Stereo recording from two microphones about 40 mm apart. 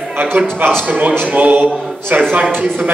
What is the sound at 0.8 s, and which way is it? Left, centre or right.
Speech, right.